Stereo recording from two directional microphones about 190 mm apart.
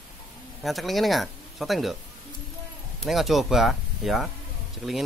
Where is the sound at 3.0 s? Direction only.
Centre (ahead or behind).